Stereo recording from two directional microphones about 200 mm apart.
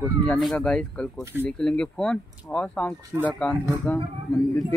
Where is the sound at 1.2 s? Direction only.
10° right (ahead or behind).